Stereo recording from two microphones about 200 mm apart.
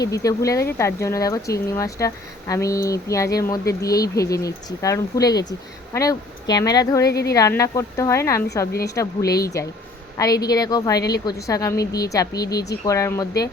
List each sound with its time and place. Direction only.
0.0 s speech: 15° left (ahead or behind)
7.1 s speech: 55° left (ahead or behind)
7.3 s a woman's voice: 15° left (ahead or behind)